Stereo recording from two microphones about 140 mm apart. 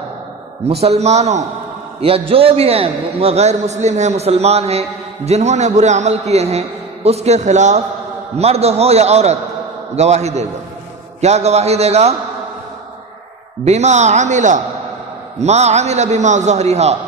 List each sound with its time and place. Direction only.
0.7 s a man's voice: 50° right (ahead or behind)
13.7 s a man's voice: 55° right (ahead or behind)